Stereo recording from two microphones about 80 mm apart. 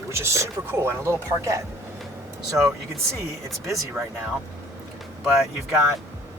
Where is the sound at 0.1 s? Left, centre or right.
Right.